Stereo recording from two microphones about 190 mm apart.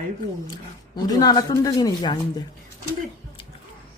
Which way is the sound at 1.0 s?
20° left (ahead or behind).